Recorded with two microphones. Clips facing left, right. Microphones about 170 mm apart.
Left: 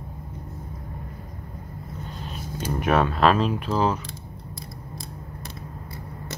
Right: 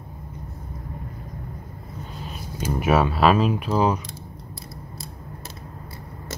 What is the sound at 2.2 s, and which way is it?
Speech, 5° right (ahead or behind).